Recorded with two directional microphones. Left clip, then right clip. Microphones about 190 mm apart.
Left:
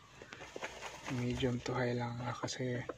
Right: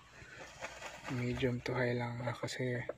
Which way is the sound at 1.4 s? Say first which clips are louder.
Right 2 dB; 10° right (ahead or behind).